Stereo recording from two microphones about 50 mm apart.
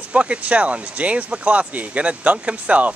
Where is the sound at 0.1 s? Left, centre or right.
Right.